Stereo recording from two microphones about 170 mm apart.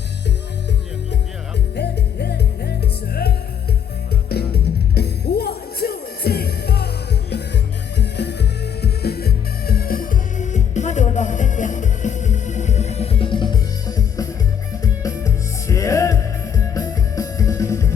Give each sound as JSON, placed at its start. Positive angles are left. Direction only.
{"t": 1.7, "sound": "music", "side_deg": 80}